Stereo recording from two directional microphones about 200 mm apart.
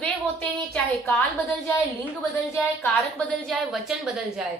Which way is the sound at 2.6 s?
5° left (ahead or behind).